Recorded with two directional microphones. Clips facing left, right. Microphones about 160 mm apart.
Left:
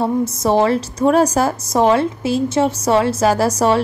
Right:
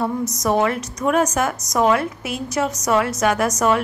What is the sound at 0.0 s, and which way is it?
A woman's voice, 30° left (ahead or behind).